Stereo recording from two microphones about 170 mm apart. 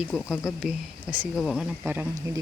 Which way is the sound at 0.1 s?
Centre (ahead or behind).